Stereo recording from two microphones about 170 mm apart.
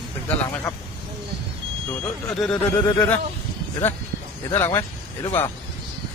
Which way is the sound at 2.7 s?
20° left (ahead or behind).